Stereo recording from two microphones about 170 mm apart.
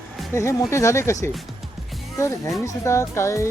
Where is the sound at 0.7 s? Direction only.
15° left (ahead or behind).